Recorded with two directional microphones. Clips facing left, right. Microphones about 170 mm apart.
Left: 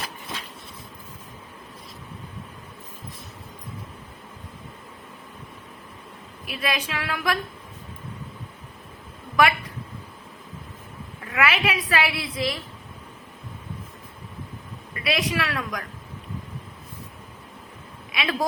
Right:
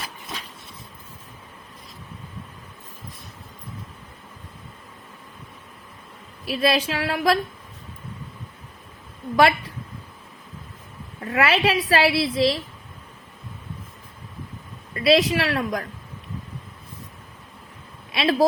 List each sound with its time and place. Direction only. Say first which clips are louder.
6.6 s a woman's voice: right 7 dB; 35° right (ahead or behind)
9.3 s a woman's voice: right 3 dB; 30° right (ahead or behind)
11.2 s a woman's voice: right 4 dB; 35° right (ahead or behind)
14.9 s a woman's voice: right 7 dB; 30° right (ahead or behind)
18.1 s speech: right 6 dB; 35° right (ahead or behind)